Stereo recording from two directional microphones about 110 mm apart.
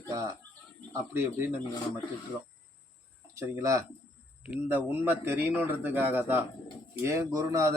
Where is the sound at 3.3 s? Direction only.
30° right (ahead or behind).